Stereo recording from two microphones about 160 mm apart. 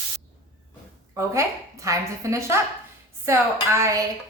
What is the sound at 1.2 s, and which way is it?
A woman's voice, 20° right (ahead or behind).